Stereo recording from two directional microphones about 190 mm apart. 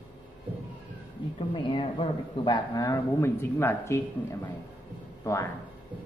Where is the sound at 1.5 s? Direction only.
25° left (ahead or behind).